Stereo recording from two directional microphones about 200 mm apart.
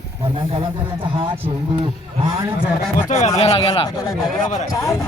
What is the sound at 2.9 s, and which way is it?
Speech, 40° left (ahead or behind).